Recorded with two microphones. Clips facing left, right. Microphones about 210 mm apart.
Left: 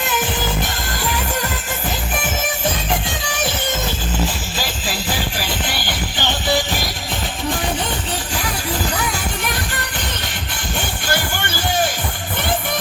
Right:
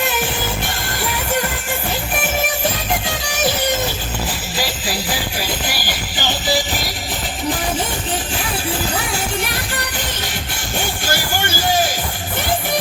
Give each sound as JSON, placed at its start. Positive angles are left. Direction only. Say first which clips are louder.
{"t": 5.5, "sound": "music", "louder": "even", "side_deg": 25}